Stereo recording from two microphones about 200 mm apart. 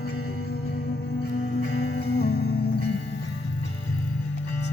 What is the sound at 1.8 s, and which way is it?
Music, 55° left (ahead or behind).